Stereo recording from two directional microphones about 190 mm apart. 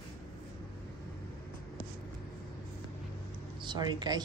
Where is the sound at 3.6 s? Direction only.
25° right (ahead or behind).